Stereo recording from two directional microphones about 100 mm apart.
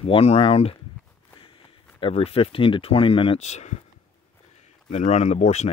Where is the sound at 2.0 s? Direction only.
75° left (ahead or behind).